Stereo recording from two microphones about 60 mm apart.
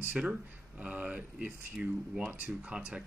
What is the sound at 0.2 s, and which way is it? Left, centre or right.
Speech, centre.